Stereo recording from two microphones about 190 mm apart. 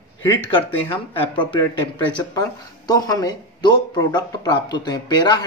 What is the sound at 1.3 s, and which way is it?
Speech, 25° left (ahead or behind).